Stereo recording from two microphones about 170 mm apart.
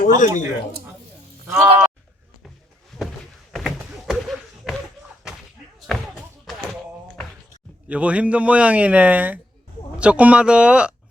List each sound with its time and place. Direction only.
0.1 s speech: 50° left (ahead or behind)
1.5 s a man's voice: 10° right (ahead or behind)
3.5 s a sound: centre (ahead or behind)
7.9 s a man's voice: 10° right (ahead or behind)